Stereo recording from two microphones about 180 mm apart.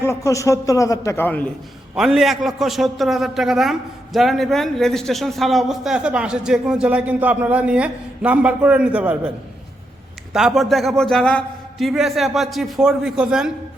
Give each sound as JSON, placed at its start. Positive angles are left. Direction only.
{"t": 0.0, "sound": "a man's voice", "side_deg": 15}
{"t": 2.0, "sound": "a man's voice", "side_deg": 0}
{"t": 10.3, "sound": "a man's voice", "side_deg": 0}